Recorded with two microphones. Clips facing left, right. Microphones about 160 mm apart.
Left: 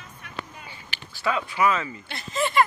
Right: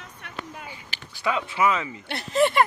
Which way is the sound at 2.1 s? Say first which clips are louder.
Right 8 dB; 65° right (ahead or behind).